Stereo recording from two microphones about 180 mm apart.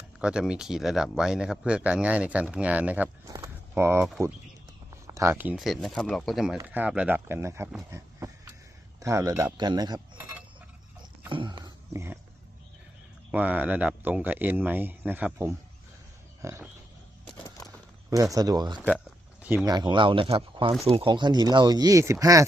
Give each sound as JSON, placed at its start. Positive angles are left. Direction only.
{"t": 0.2, "sound": "speech", "side_deg": -5}
{"t": 3.2, "sound": "keys jangling", "side_deg": -20}
{"t": 4.9, "sound": "a sound", "side_deg": -15}
{"t": 5.5, "sound": "speech", "side_deg": 0}
{"t": 7.8, "sound": "a sound", "side_deg": -15}
{"t": 9.0, "sound": "speech", "side_deg": -15}
{"t": 11.3, "sound": "speech", "side_deg": -25}
{"t": 13.3, "sound": "speech", "side_deg": -10}
{"t": 17.4, "sound": "a sound", "side_deg": 15}
{"t": 18.1, "sound": "speech", "side_deg": -20}
{"t": 18.9, "sound": "a sound", "side_deg": -5}
{"t": 19.6, "sound": "speech", "side_deg": -25}